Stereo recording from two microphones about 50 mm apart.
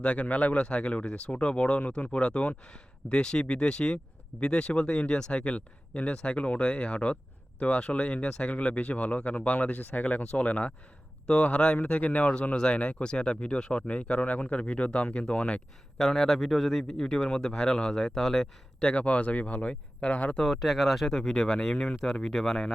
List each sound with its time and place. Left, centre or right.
0.0 s speech: left
16.0 s speech: centre
18.8 s speech: left
20.4 s speech: centre
21.1 s speech: centre